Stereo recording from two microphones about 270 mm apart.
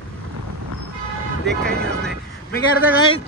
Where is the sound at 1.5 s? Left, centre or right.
Centre.